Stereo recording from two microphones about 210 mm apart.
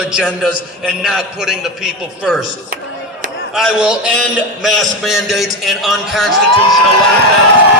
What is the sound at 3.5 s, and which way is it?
A man's voice, 5° right (ahead or behind).